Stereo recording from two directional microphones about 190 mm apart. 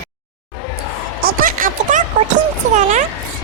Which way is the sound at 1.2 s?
50° right (ahead or behind).